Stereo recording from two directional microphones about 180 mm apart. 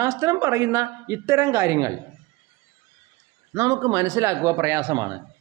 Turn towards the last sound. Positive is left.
turn(degrees=-20)  # may be behind; listen again after turning